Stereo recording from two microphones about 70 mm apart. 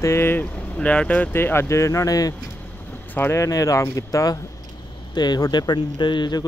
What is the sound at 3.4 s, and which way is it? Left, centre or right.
Speech, left.